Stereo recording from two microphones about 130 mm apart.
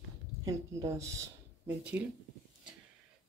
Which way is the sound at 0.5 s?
25° right (ahead or behind).